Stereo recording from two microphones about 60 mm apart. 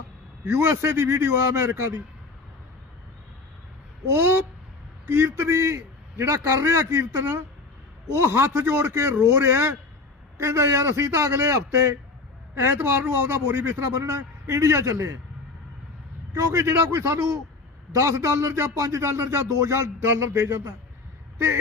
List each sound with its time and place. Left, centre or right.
0.5 s speech: right
4.1 s a man's voice: right
16.3 s speech: right